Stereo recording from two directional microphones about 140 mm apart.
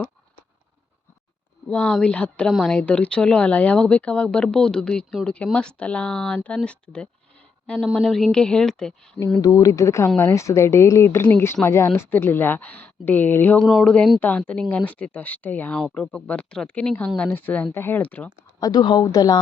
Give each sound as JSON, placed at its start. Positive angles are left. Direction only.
{"t": 1.6, "sound": "a woman's voice", "side_deg": 5}
{"t": 9.4, "sound": "speech", "side_deg": 25}
{"t": 13.7, "sound": "a woman's voice", "side_deg": 0}
{"t": 18.6, "sound": "speech", "side_deg": 30}